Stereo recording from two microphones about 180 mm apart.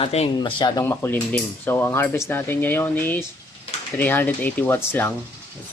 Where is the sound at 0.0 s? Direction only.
35° left (ahead or behind).